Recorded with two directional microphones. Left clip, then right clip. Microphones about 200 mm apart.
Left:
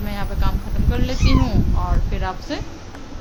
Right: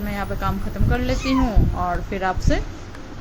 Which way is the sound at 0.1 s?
10° right (ahead or behind).